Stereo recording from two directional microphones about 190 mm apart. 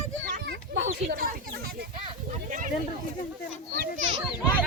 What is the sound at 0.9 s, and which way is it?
Speech, 45° right (ahead or behind).